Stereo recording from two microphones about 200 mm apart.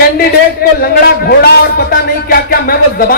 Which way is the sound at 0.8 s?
50° left (ahead or behind).